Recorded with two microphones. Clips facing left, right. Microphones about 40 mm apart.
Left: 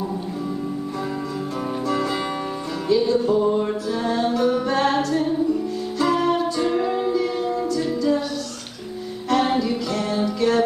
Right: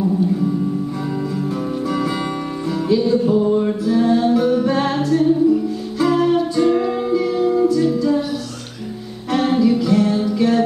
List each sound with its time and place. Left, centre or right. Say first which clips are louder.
1.9 s music: right 1 dB; centre
9.3 s music: right 4 dB; centre